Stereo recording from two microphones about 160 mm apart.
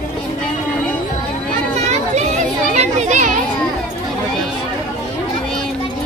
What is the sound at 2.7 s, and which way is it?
Children playing, 45° right (ahead or behind).